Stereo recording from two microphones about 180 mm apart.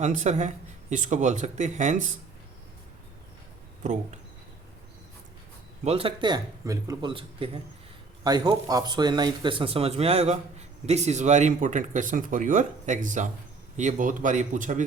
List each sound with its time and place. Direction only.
0.0 s speech: 40° right (ahead or behind)
5.8 s a man's voice: 35° right (ahead or behind)